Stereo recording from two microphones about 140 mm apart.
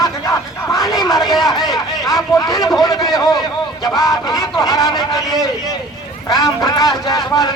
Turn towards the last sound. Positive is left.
turn(degrees=25)  # may be behind; listen again after turning